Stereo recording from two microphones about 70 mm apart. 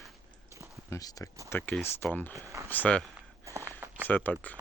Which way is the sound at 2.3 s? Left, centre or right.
Right.